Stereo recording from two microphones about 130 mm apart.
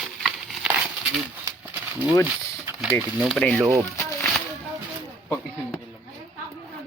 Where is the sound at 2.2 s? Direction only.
10° right (ahead or behind).